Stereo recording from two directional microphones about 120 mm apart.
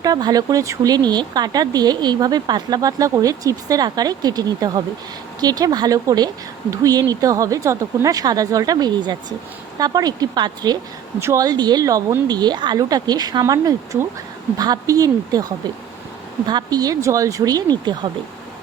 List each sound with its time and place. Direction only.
0.0 s speech: 30° right (ahead or behind)